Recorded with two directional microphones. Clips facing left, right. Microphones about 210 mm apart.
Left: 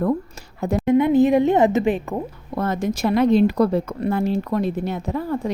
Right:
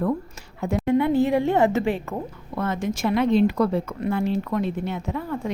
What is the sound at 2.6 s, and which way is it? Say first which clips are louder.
A woman's voice: left 3 dB; 40° left (ahead or behind).